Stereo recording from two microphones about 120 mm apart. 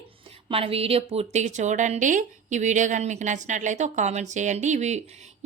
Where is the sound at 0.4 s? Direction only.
50° right (ahead or behind).